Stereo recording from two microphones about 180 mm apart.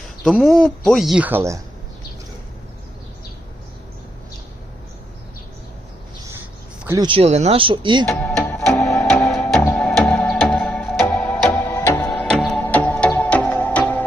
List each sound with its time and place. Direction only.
0.3 s speech: centre (ahead or behind)
6.8 s speech: 15° right (ahead or behind)
7.1 s speech: 35° right (ahead or behind)
8.0 s music: 5° left (ahead or behind)